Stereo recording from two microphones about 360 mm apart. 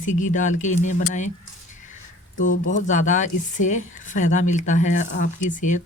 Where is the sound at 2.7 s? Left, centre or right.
Left.